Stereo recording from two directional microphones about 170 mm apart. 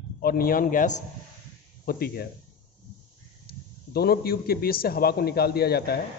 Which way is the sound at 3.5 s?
65° left (ahead or behind).